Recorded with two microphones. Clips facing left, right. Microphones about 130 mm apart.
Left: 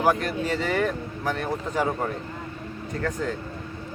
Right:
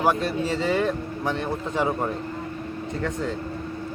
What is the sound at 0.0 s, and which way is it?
Speech, 25° right (ahead or behind).